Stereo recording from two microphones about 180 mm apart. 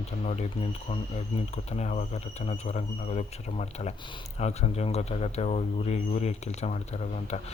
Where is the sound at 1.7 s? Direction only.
40° left (ahead or behind).